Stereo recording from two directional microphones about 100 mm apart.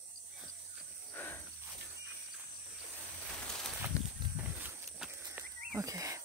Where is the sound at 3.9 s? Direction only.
30° left (ahead or behind).